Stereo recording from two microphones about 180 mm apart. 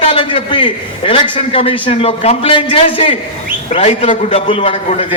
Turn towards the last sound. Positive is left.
turn(degrees=35)  # may be behind; listen again after turning